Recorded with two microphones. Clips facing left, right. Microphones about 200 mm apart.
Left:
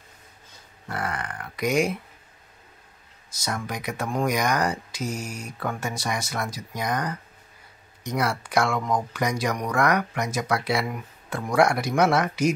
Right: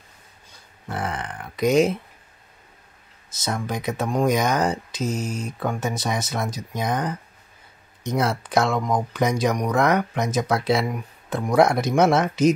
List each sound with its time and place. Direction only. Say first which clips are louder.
0.8 s speech: right 2 dB; 20° right (ahead or behind)
3.4 s speech: right 4 dB; 25° right (ahead or behind)